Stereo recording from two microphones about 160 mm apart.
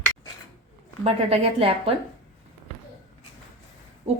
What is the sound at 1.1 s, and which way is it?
Speech, 40° right (ahead or behind).